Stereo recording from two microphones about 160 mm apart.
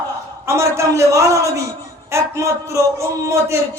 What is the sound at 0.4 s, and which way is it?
A man's voice, 15° right (ahead or behind).